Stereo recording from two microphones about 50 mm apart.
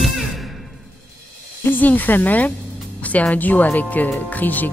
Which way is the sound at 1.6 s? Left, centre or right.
Left.